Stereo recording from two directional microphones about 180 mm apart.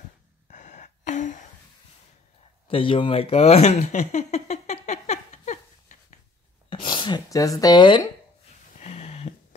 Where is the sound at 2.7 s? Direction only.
30° left (ahead or behind).